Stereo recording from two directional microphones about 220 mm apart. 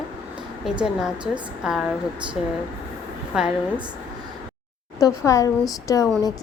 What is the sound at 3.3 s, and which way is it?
Speech, 5° right (ahead or behind).